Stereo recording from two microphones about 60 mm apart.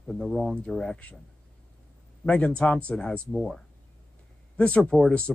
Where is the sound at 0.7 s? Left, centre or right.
Centre.